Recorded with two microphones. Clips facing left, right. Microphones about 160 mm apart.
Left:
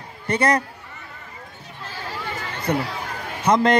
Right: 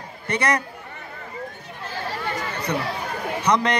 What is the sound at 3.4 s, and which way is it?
Speech, 50° left (ahead or behind).